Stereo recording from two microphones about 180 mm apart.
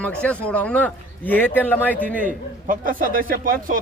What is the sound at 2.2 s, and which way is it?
A man's voice, 50° right (ahead or behind).